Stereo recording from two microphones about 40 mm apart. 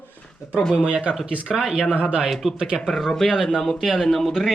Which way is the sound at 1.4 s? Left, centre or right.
Centre.